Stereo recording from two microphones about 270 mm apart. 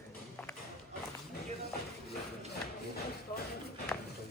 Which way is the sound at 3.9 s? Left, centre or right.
Centre.